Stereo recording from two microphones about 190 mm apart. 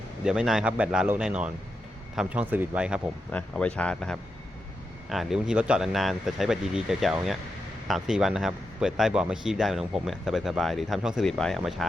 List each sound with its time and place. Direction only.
0.3 s speech: 5° right (ahead or behind)
3.3 s speech: 5° left (ahead or behind)